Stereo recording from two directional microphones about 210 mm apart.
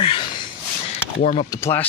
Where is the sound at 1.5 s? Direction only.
15° left (ahead or behind).